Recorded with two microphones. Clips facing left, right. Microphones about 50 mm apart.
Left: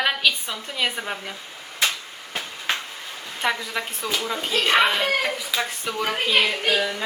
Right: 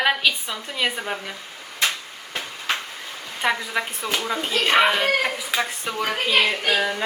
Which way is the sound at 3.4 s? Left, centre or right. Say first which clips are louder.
Right 2 dB; centre.